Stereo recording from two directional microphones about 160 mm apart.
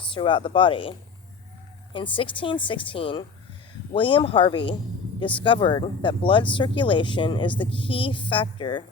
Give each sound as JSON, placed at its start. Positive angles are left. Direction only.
{"t": 0.1, "sound": "speech", "side_deg": 30}